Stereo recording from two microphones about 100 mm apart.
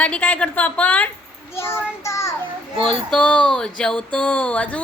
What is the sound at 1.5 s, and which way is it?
Child singing, 25° left (ahead or behind).